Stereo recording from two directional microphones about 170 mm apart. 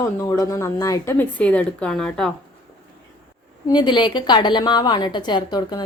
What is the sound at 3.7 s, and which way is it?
A woman's voice, 25° left (ahead or behind).